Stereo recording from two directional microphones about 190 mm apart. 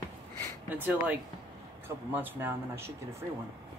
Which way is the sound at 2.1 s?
10° right (ahead or behind).